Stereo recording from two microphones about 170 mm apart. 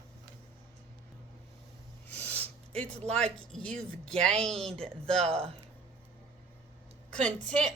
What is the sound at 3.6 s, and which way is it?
Speech, 5° left (ahead or behind).